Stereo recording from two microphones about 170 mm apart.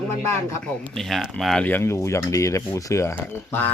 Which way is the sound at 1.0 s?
Centre (ahead or behind).